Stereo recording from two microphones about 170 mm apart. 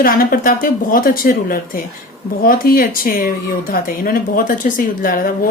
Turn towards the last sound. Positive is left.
turn(degrees=55)  # may be behind; listen again after turning